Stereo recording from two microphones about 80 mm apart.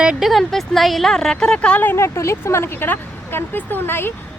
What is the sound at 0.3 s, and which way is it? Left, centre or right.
Speech, centre.